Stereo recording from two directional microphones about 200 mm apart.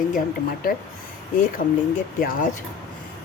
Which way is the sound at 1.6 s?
40° left (ahead or behind).